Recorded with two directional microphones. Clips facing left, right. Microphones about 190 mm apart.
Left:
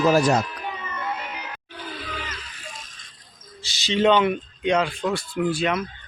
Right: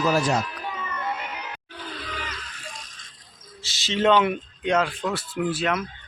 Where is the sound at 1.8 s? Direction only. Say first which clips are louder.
Left 1 dB; 5° left (ahead or behind).